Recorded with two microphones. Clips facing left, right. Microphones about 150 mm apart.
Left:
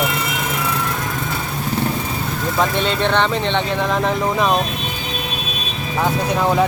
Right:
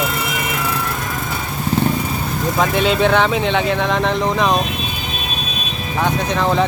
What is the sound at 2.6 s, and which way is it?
Speech, 5° right (ahead or behind).